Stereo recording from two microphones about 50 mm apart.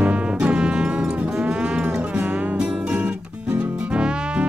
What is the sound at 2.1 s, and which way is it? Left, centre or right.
Music, right.